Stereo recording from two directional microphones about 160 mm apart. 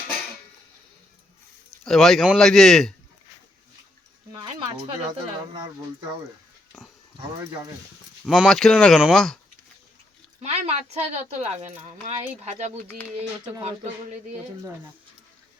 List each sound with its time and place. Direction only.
1.8 s speech: centre (ahead or behind)
5.1 s speech: 30° right (ahead or behind)
8.2 s speech: centre (ahead or behind)
10.4 s a woman's voice: 40° right (ahead or behind)